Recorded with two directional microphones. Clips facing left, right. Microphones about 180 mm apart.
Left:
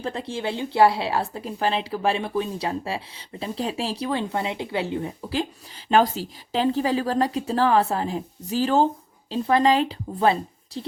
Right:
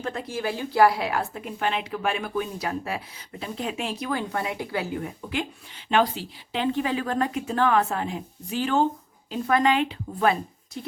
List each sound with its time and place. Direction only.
0.0 s a woman's voice: 30° left (ahead or behind)
5.9 s speech: 40° left (ahead or behind)